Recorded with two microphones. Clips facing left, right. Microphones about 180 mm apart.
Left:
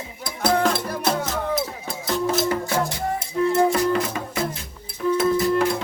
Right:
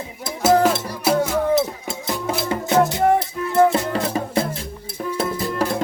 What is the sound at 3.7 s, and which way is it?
Music, 30° right (ahead or behind).